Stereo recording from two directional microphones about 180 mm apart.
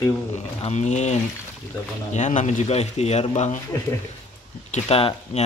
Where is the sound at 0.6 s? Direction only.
40° left (ahead or behind).